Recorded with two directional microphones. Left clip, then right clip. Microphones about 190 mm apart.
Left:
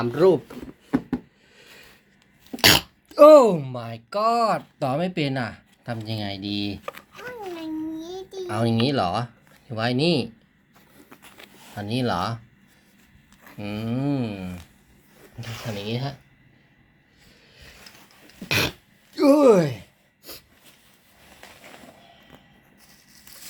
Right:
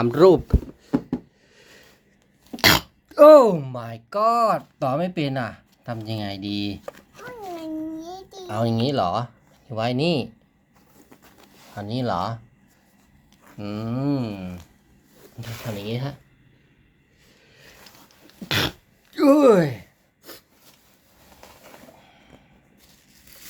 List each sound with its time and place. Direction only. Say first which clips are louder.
0.0 s speech: right 4 dB; 25° right (ahead or behind)
0.9 s a sound: even; 15° right (ahead or behind)
1.5 s sniff: left 2 dB; centre (ahead or behind)
2.5 s speech: even; 5° right (ahead or behind)
7.2 s babbling: right 1 dB; 30° right (ahead or behind)
8.4 s speech: even; 5° left (ahead or behind)
11.8 s speech: even; 5° left (ahead or behind)
13.4 s speech: even; centre (ahead or behind)
15.6 s speech: even; centre (ahead or behind)
17.2 s a sound: left 1 dB; centre (ahead or behind)
18.4 s throat clearing: even; 5° right (ahead or behind)
19.1 s speech: right 1 dB; 10° right (ahead or behind)